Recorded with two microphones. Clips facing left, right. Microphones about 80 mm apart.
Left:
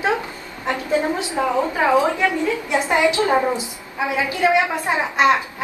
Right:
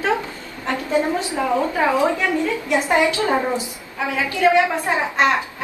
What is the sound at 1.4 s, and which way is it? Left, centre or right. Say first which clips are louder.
Speech: left 3 dB; left.